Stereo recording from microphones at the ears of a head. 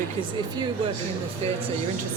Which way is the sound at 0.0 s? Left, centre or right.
Right.